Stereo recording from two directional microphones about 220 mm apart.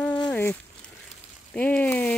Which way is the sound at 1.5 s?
5° left (ahead or behind).